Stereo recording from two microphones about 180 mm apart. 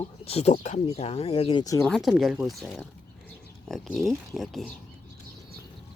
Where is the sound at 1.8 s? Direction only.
Centre (ahead or behind).